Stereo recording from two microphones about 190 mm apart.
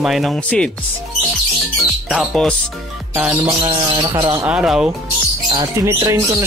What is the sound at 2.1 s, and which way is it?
Speech, centre (ahead or behind).